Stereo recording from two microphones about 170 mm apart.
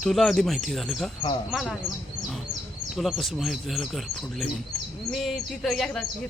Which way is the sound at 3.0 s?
Centre (ahead or behind).